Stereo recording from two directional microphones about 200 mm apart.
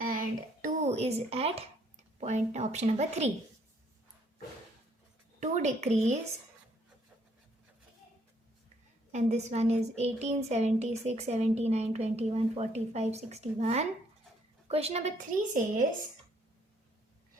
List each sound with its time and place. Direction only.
0.0 s a sound: 45° right (ahead or behind)
2.2 s a woman's voice: 35° right (ahead or behind)
5.4 s a woman's voice: 35° right (ahead or behind)
9.1 s a woman's voice: 35° right (ahead or behind)